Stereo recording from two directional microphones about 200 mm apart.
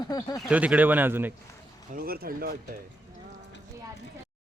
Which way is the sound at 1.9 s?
50° right (ahead or behind).